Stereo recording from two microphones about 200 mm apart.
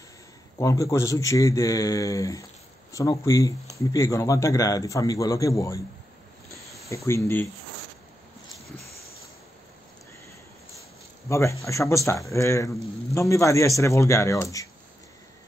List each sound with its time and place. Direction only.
0.6 s speech: 15° left (ahead or behind)
7.1 s speech: 10° left (ahead or behind)
8.7 s a sound: 50° left (ahead or behind)
11.2 s speech: 15° left (ahead or behind)